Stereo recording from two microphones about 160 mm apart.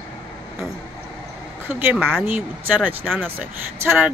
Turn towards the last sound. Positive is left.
turn(degrees=-15)  # may be behind; listen again after turning